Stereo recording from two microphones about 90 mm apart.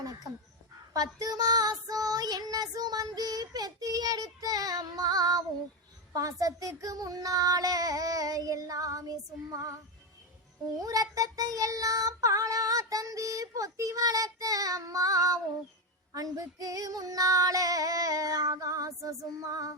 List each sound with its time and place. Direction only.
0.0 s a sound: 40° right (ahead or behind)
0.9 s child singing: 40° right (ahead or behind)
6.4 s child singing: 40° right (ahead or behind)